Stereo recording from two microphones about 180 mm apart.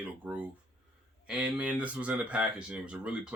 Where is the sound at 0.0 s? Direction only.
10° right (ahead or behind).